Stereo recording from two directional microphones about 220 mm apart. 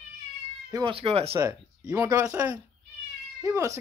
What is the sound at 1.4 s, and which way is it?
Speech, 15° right (ahead or behind).